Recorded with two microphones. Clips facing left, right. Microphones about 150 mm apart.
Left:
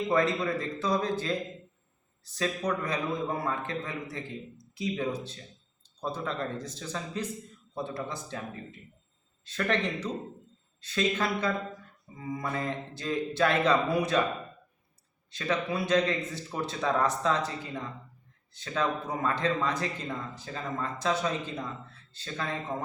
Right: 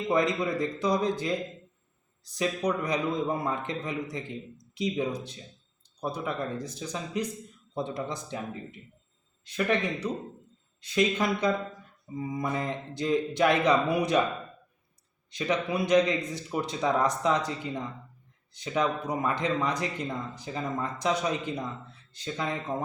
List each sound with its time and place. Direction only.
0.1 s a man's voice: 15° right (ahead or behind)
15.3 s a man's voice: 15° right (ahead or behind)